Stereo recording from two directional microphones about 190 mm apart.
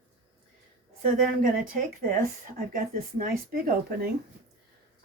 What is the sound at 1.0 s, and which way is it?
Speech, 45° right (ahead or behind).